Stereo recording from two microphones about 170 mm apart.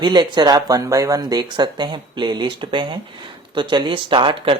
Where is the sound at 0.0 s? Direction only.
25° right (ahead or behind).